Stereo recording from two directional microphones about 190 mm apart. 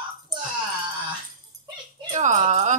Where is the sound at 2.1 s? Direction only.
40° right (ahead or behind).